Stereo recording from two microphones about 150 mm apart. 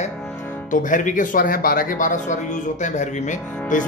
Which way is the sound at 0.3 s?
10° left (ahead or behind).